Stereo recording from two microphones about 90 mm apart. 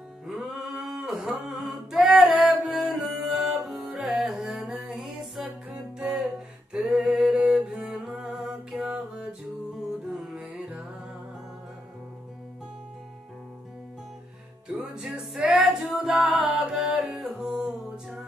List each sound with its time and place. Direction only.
0.3 s a sound: 10° right (ahead or behind)
1.6 s music: 5° right (ahead or behind)
5.4 s music: 15° right (ahead or behind)
6.0 s music: 5° right (ahead or behind)
14.8 s music: 10° right (ahead or behind)